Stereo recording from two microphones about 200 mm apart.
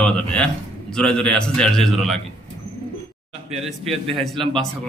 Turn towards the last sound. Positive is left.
turn(degrees=0)  # may be behind; listen again after turning